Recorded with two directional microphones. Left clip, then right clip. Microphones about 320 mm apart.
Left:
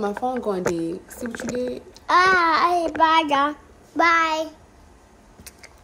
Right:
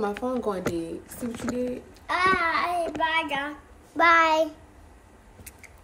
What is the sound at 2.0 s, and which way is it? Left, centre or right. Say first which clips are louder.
A child's voice: left 7 dB; left.